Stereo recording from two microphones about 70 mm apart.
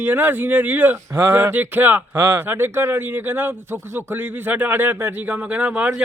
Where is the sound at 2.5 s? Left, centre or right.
Right.